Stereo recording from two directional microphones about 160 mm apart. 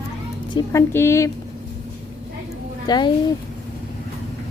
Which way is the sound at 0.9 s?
15° left (ahead or behind).